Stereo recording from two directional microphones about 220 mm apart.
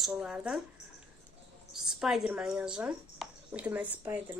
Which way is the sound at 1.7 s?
Centre (ahead or behind).